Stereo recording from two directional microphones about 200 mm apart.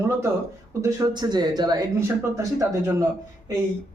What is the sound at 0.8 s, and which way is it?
Speech, 20° right (ahead or behind).